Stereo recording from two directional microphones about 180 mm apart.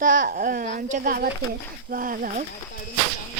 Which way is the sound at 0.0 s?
50° right (ahead or behind).